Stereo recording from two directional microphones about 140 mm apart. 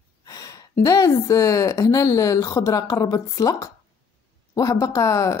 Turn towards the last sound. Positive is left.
turn(degrees=20)  # may be behind; listen again after turning